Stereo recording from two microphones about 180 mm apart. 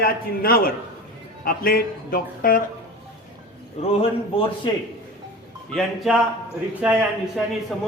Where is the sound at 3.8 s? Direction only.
35° left (ahead or behind).